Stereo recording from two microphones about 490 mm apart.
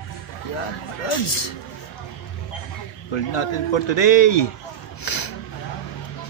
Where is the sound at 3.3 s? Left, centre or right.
Left.